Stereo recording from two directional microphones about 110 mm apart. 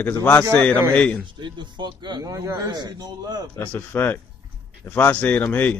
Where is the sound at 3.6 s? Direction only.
20° left (ahead or behind).